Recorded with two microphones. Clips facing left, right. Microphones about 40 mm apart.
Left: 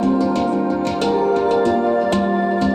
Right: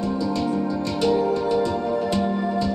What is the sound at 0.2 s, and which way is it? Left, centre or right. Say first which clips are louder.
Music: left 6 dB; left.